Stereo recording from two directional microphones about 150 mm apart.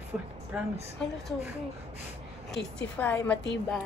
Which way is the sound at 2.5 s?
10° left (ahead or behind).